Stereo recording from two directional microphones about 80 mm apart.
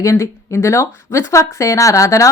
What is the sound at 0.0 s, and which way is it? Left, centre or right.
Speech, left.